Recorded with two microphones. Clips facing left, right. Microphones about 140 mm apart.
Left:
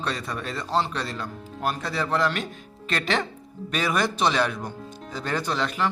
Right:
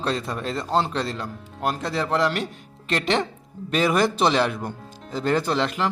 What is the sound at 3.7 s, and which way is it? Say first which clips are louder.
A man's voice: right 5 dB; 25° right (ahead or behind).